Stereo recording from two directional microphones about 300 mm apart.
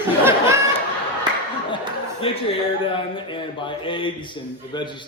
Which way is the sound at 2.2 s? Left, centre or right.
Centre.